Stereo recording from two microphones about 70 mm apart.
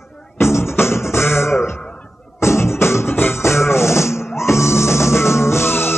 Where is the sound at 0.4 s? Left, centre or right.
Left.